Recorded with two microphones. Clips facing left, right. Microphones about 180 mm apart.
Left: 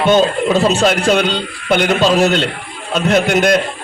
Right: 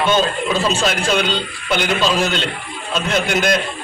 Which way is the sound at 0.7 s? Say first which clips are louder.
Left 6 dB; 70° left (ahead or behind).